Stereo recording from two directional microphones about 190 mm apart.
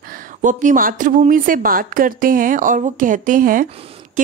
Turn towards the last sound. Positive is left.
turn(degrees=-40)  # may be behind; listen again after turning